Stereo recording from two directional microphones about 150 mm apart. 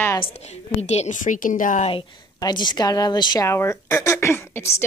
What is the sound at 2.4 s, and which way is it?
A woman's voice, 30° left (ahead or behind).